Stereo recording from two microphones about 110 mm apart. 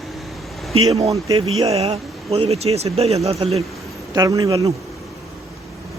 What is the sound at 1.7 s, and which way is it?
Speech, 70° right (ahead or behind).